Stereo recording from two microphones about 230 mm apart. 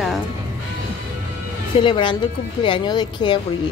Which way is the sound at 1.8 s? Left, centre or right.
Left.